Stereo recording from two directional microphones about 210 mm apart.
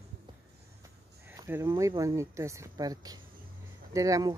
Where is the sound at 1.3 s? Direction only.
15° right (ahead or behind).